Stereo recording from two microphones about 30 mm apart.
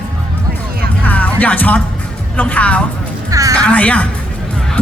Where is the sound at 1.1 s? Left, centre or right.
Left.